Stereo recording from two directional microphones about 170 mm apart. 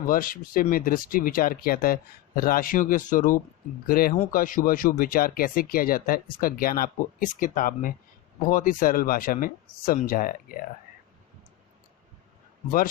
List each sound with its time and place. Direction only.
0.0 s speech: 55° left (ahead or behind)